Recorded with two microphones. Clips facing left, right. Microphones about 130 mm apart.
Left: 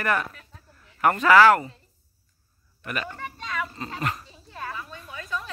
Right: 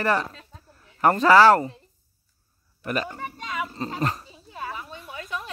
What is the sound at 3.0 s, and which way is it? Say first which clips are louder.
Speech: right 2 dB; 15° right (ahead or behind).